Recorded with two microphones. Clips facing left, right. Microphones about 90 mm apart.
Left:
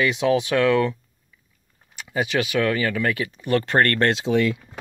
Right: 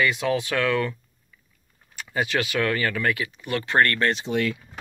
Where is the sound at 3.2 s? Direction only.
35° left (ahead or behind).